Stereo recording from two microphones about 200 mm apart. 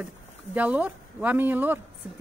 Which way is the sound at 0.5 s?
10° right (ahead or behind).